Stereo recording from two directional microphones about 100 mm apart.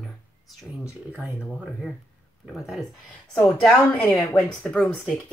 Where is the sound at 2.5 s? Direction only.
Centre (ahead or behind).